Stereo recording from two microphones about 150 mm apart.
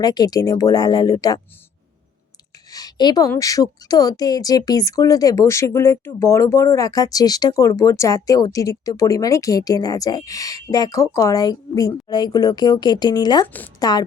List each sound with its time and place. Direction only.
0.0 s a woman's voice: 25° left (ahead or behind)
2.6 s a woman's voice: 25° left (ahead or behind)